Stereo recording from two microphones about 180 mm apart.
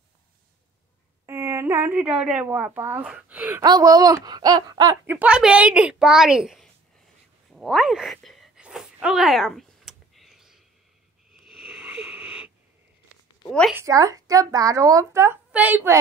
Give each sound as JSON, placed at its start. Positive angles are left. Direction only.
{"t": 1.2, "sound": "a woman's voice", "side_deg": -15}
{"t": 3.6, "sound": "speech", "side_deg": -20}
{"t": 5.0, "sound": "a woman's voice", "side_deg": -10}
{"t": 7.5, "sound": "a sound", "side_deg": 0}
{"t": 11.4, "sound": "wheeze", "side_deg": 0}
{"t": 13.5, "sound": "a woman's voice", "side_deg": 5}
{"t": 13.7, "sound": "speech", "side_deg": -20}